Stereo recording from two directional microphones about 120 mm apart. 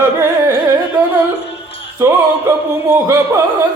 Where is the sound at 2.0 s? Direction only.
20° right (ahead or behind).